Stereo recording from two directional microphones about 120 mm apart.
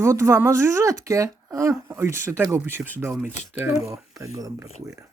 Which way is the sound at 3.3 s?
70° left (ahead or behind).